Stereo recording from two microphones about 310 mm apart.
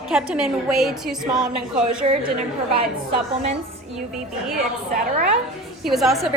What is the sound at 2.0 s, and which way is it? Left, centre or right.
Speech, right.